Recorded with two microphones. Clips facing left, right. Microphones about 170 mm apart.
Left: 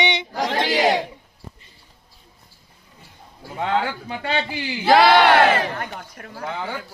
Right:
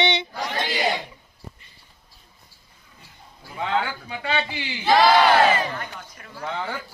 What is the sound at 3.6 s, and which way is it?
Speech, 50° left (ahead or behind).